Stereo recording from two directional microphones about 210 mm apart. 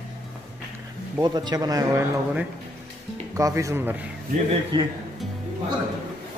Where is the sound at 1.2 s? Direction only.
20° right (ahead or behind).